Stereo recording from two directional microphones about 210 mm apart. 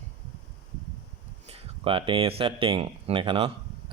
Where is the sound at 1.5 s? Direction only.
25° right (ahead or behind).